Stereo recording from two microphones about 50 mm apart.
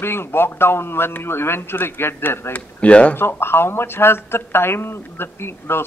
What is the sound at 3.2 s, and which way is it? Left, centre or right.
Speech, left.